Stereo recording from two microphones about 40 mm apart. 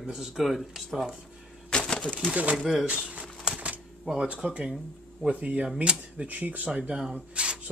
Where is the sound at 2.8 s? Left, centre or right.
Right.